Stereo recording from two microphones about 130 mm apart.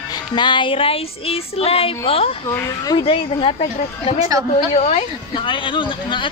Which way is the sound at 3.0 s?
45° left (ahead or behind).